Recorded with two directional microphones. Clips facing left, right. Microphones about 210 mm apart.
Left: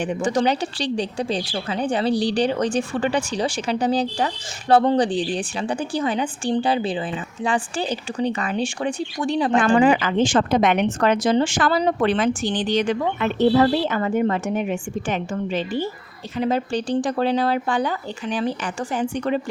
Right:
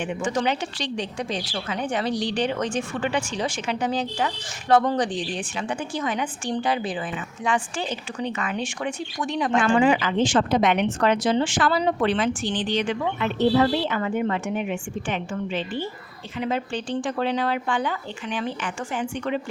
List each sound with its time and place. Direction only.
0.0 s speech: 35° left (ahead or behind)
9.9 s a woman's voice: 50° left (ahead or behind)